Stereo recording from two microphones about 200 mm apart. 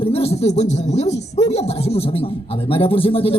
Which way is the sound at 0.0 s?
30° left (ahead or behind).